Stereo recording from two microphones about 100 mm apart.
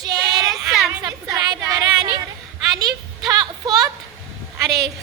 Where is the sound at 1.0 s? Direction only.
40° right (ahead or behind).